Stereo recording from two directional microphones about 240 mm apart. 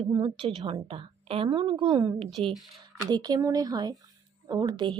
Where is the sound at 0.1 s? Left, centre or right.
Centre.